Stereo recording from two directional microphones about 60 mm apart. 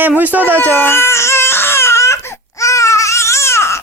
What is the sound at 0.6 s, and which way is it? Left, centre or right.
Baby cry, left.